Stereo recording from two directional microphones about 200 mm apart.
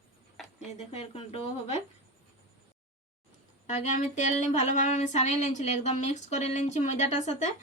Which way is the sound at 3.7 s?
35° left (ahead or behind).